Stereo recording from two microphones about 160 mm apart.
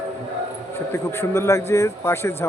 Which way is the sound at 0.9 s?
15° left (ahead or behind).